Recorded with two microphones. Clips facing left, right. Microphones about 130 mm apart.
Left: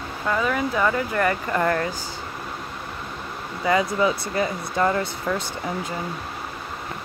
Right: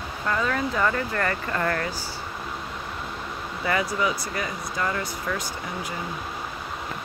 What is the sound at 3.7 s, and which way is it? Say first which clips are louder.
Speech: left 5 dB; 20° left (ahead or behind).